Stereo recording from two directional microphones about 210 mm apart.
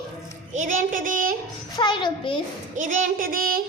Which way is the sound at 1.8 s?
20° left (ahead or behind).